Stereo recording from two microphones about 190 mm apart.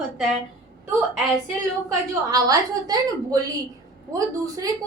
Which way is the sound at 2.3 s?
20° right (ahead or behind).